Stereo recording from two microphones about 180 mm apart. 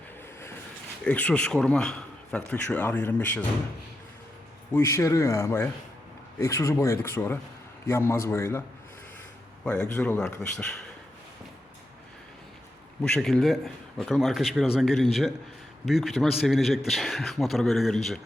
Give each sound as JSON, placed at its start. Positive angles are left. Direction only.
{"t": 1.0, "sound": "a man's voice", "side_deg": 10}
{"t": 4.7, "sound": "speech", "side_deg": 15}
{"t": 9.6, "sound": "a man's voice", "side_deg": 5}
{"t": 13.0, "sound": "a man's voice", "side_deg": 5}